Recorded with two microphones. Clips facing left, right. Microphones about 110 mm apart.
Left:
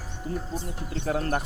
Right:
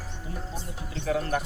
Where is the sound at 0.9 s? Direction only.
40° left (ahead or behind).